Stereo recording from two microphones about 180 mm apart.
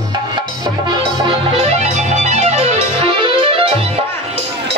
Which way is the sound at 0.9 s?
30° right (ahead or behind).